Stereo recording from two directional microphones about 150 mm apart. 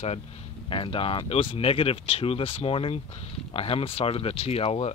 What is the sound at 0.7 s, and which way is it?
Speech, 35° left (ahead or behind).